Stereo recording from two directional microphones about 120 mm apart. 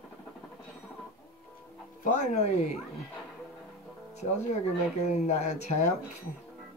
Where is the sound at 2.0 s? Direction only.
85° left; by 2.8 s 70° left (ahead or behind).